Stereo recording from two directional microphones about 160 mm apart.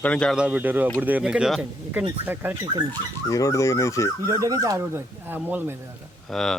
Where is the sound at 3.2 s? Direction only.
20° left (ahead or behind).